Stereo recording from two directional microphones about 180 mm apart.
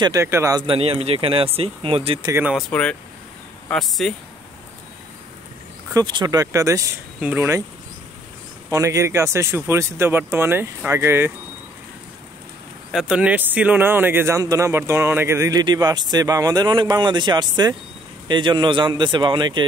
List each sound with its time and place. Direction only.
0.0 s speech: 15° right (ahead or behind)
2.2 s speech: 15° right (ahead or behind)
2.5 s speech: 5° left (ahead or behind)
5.9 s speech: 25° right (ahead or behind)
8.6 s speech: 15° right (ahead or behind)
12.9 s speech: 5° right (ahead or behind); by 19.6 s 25° right (ahead or behind)